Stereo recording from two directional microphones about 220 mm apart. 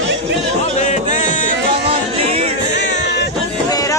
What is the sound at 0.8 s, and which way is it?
Music, 35° left (ahead or behind).